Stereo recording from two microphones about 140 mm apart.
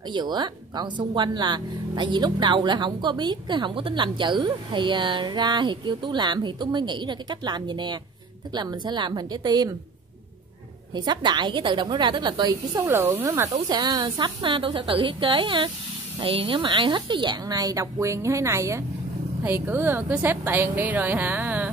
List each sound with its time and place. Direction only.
0.1 s speech: 30° right (ahead or behind)
10.9 s speech: 30° right (ahead or behind)
13.7 s a woman's voice: 30° right (ahead or behind); by 21.6 s 10° right (ahead or behind)